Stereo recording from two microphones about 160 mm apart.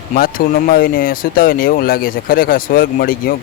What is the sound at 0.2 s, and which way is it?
Speech, 65° left (ahead or behind).